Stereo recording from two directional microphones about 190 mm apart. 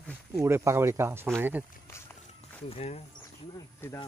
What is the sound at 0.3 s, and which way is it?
Speech, 15° right (ahead or behind).